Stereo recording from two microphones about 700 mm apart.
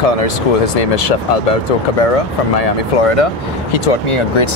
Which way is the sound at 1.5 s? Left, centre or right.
Left.